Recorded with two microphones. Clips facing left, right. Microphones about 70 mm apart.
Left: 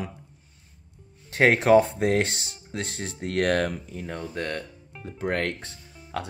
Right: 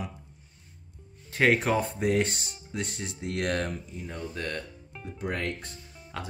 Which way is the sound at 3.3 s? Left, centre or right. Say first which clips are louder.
Left 6 dB; left.